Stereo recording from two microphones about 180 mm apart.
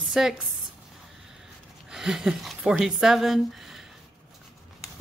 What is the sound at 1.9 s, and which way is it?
Speech, centre (ahead or behind).